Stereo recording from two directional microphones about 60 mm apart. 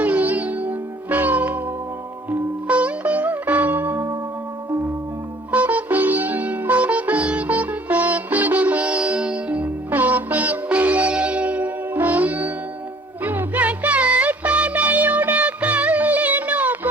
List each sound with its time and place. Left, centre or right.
0.0 s music: right
2.3 s sitar: right
5.5 s music: right